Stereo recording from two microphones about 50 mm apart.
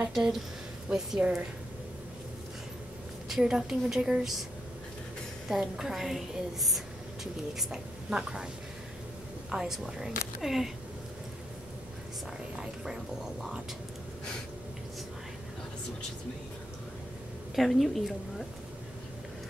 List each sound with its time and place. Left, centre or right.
0.1 s a woman's voice: centre
3.3 s a woman's voice: centre
5.5 s a woman's voice: centre
7.5 s a woman's voice: centre
9.5 s a woman's voice: centre
12.5 s a sound: centre
17.6 s speech: centre